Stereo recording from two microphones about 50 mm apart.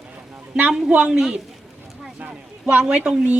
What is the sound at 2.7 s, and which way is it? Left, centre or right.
Speech, right.